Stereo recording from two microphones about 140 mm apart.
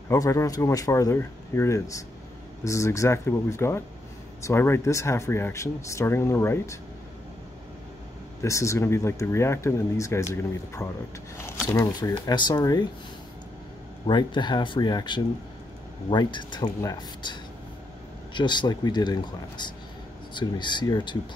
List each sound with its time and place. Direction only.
0.1 s speech: 20° left (ahead or behind)
8.4 s speech: 20° left (ahead or behind)
12.1 s speech: 35° left (ahead or behind)
14.0 s speech: 35° left (ahead or behind)